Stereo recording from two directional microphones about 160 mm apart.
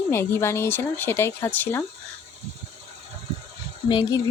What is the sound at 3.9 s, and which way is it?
Speech, 30° left (ahead or behind).